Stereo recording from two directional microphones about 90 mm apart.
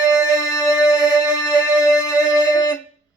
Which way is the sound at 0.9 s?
10° right (ahead or behind).